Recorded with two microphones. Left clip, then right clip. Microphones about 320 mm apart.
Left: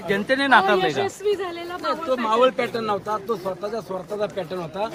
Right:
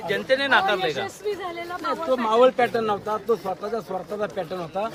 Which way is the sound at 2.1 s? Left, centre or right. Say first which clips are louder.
Right 1 dB; centre.